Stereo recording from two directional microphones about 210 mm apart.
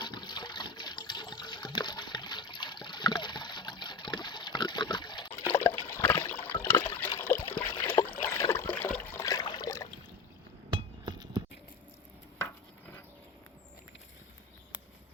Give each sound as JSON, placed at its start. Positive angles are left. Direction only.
{"t": 0.0, "sound": "water", "side_deg": 20}
{"t": 5.3, "sound": "water", "side_deg": 10}
{"t": 7.2, "sound": "trickle", "side_deg": 10}
{"t": 10.7, "sound": "chink", "side_deg": -20}